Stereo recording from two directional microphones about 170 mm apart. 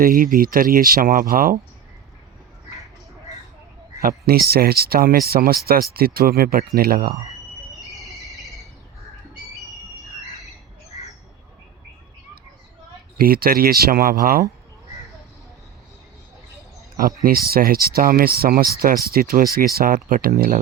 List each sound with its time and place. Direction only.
0.0 s speech: 55° right (ahead or behind)
4.3 s speech: 65° right (ahead or behind)
7.9 s a sound: centre (ahead or behind)
13.1 s speech: 60° right (ahead or behind)
17.2 s speech: 60° right (ahead or behind)